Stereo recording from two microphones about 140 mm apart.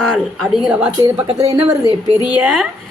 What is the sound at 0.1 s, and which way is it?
Speech, centre (ahead or behind).